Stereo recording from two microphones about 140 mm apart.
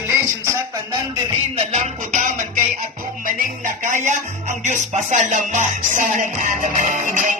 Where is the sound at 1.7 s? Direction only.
55° right (ahead or behind).